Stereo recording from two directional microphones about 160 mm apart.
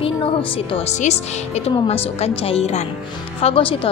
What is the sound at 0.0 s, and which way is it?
A woman's voice, 35° left (ahead or behind).